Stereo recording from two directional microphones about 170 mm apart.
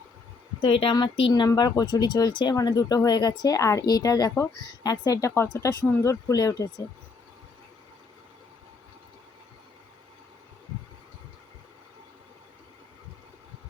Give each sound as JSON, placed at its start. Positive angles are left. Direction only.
{"t": 0.6, "sound": "speech", "side_deg": 30}